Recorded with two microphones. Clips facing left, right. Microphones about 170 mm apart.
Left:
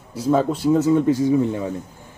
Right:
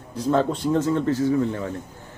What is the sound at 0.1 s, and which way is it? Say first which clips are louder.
Speech: left 2 dB; 10° left (ahead or behind).